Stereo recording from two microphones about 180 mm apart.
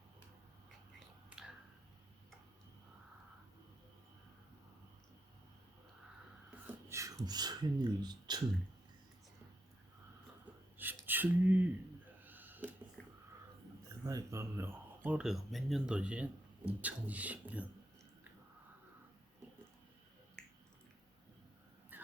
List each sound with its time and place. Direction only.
0.9 s finger snapping: 5° right (ahead or behind)
6.7 s beatboxing: 15° right (ahead or behind)
7.3 s speech: 20° right (ahead or behind)
10.4 s a sound: 10° right (ahead or behind)
13.0 s a sound: 5° left (ahead or behind)
14.0 s speech: 20° right (ahead or behind)
21.9 s dog: 10° right (ahead or behind)